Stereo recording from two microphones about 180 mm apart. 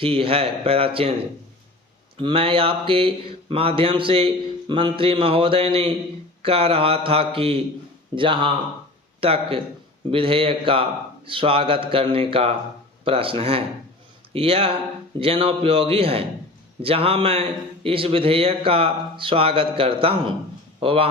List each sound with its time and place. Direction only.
0.0 s a man's voice: 30° right (ahead or behind)
2.1 s a man's voice: 30° right (ahead or behind)